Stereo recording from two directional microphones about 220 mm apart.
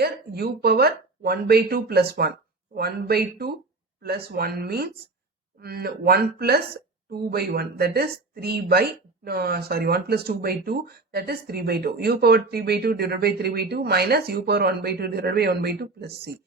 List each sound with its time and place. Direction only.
0.0 s a woman's voice: 45° right (ahead or behind)